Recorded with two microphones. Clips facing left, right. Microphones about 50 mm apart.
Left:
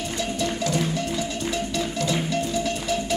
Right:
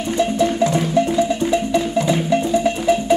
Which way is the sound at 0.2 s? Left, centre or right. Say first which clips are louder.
Right 10 dB; right.